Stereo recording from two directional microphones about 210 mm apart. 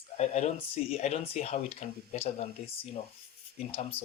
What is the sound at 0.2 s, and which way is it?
Speech, 30° left (ahead or behind).